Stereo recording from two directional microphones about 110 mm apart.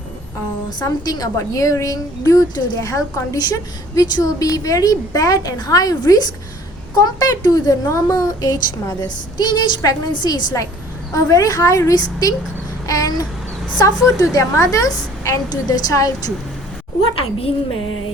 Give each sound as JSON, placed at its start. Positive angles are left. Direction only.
{"t": 0.8, "sound": "a woman's voice", "side_deg": 35}
{"t": 17.0, "sound": "a woman's voice", "side_deg": 55}